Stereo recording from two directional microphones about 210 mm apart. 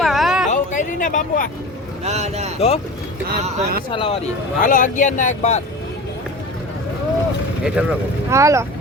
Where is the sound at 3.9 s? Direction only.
25° left (ahead or behind).